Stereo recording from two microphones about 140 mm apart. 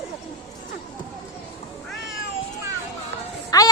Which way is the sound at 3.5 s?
25° left (ahead or behind).